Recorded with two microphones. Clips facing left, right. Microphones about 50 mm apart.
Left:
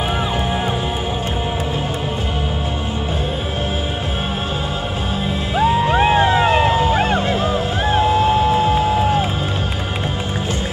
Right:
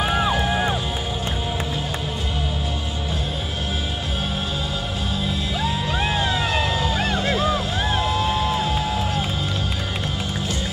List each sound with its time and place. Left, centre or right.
0.3 s music: left
5.6 s music: left